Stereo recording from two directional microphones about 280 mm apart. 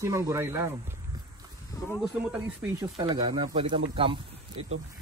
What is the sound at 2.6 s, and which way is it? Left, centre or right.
Speech, centre.